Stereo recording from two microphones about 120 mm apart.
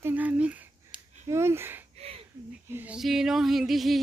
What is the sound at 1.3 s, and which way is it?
Speech, 20° right (ahead or behind).